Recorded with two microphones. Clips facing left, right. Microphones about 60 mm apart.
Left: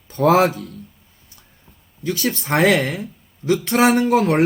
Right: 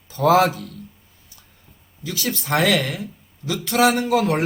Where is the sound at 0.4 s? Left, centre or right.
Right.